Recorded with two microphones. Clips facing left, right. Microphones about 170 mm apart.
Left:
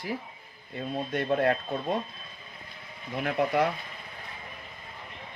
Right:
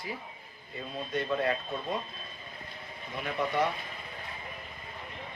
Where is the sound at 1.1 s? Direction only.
55° left (ahead or behind).